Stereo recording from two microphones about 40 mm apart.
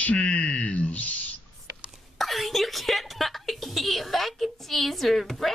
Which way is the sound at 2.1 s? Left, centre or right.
Centre.